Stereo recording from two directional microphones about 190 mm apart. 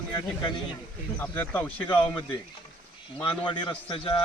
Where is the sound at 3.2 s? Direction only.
25° left (ahead or behind).